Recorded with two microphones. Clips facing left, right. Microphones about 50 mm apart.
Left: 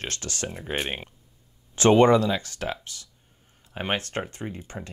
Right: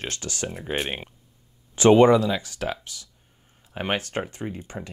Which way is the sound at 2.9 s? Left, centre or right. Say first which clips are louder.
Right 1 dB; left.